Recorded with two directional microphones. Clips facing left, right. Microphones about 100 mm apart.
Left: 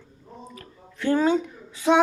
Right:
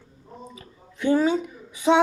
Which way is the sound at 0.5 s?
15° right (ahead or behind).